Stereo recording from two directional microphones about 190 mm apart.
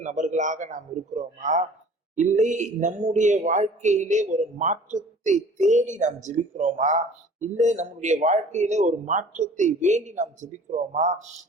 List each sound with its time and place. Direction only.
0.0 s speech: 40° right (ahead or behind)